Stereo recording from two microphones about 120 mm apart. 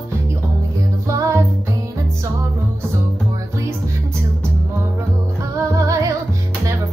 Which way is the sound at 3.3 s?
25° right (ahead or behind).